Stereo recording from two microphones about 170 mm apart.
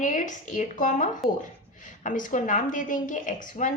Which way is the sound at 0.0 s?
50° left (ahead or behind).